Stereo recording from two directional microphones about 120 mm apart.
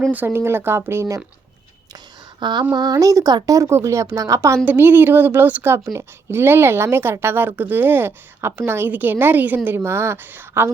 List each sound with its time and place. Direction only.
0.1 s speech: 15° right (ahead or behind)
2.4 s a sound: 40° right (ahead or behind)
2.7 s speech: 35° right (ahead or behind)